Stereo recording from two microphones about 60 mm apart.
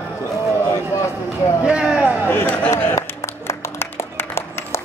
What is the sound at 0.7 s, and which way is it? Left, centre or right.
Speech, left.